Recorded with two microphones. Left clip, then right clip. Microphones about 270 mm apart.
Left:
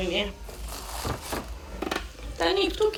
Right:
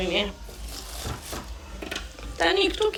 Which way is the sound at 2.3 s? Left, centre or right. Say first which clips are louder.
Right 2 dB; centre.